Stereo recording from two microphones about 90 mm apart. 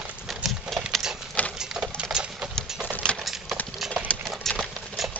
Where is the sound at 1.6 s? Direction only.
5° right (ahead or behind).